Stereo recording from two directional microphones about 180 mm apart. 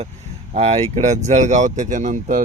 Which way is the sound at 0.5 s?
35° right (ahead or behind).